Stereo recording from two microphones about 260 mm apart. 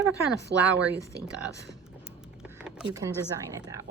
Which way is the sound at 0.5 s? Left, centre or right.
Right.